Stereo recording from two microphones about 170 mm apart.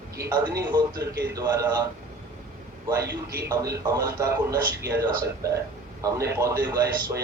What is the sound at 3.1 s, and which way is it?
Speech, 75° right (ahead or behind).